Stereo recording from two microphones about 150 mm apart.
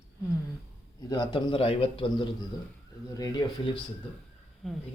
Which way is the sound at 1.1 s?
30° left (ahead or behind).